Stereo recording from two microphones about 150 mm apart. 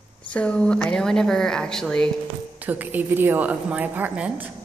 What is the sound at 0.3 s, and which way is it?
Speech, 5° left (ahead or behind).